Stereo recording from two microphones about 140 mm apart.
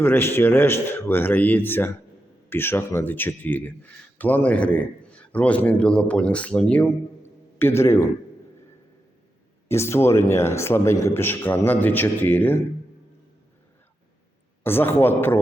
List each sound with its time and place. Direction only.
0.0 s a man's voice: 15° left (ahead or behind)
9.6 s a man's voice: 20° left (ahead or behind)
14.6 s a man's voice: 15° left (ahead or behind)